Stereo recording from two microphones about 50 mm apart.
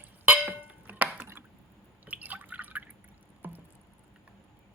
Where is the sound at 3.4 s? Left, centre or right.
Right.